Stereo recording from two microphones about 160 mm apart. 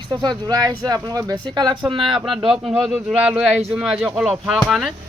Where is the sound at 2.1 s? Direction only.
Centre (ahead or behind).